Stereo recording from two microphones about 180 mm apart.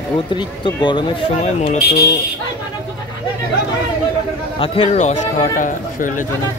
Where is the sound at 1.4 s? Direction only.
35° left (ahead or behind).